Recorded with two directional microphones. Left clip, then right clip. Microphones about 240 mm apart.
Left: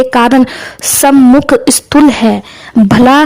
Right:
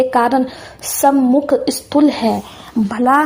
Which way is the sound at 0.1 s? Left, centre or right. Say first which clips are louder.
Left 6 dB; left.